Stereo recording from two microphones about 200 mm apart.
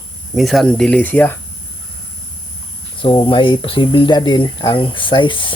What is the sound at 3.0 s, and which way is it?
Speech, 25° left (ahead or behind).